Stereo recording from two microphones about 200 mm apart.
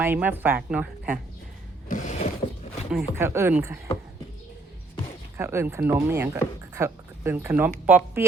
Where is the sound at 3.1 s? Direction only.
10° right (ahead or behind).